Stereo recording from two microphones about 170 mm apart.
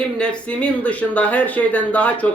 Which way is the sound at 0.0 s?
5° left (ahead or behind).